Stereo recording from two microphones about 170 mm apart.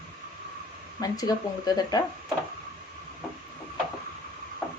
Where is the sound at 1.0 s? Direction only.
20° left (ahead or behind).